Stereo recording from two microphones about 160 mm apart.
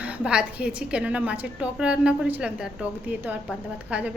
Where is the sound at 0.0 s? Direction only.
5° right (ahead or behind).